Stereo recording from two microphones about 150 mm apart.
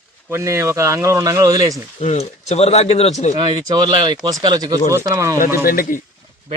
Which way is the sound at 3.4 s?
30° right (ahead or behind).